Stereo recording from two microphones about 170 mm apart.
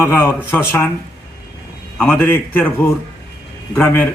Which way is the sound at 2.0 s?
10° left (ahead or behind).